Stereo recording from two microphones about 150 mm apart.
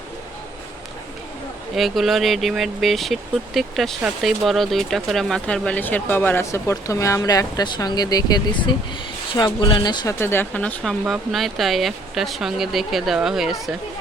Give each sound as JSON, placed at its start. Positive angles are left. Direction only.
{"t": 1.7, "sound": "speech", "side_deg": 0}
{"t": 10.2, "sound": "speech", "side_deg": 15}